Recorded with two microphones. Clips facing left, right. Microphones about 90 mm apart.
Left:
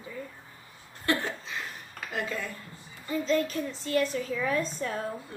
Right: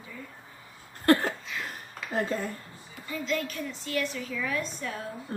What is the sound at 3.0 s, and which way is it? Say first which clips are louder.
A woman's voice: left 4 dB; 35° left (ahead or behind).